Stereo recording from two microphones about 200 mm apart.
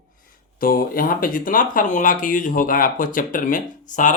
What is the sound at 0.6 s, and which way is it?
Speech, 45° left (ahead or behind).